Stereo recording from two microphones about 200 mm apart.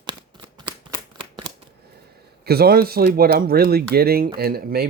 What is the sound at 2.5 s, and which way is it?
Speech, 50° right (ahead or behind).